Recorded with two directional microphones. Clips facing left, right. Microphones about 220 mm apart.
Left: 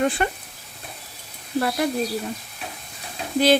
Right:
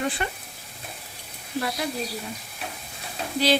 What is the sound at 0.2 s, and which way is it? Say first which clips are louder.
Speech: left 6 dB; 50° left (ahead or behind).